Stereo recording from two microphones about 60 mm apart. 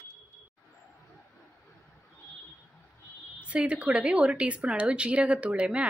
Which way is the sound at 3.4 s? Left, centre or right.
Centre.